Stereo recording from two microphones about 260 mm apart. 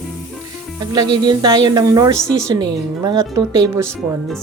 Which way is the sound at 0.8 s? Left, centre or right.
Centre.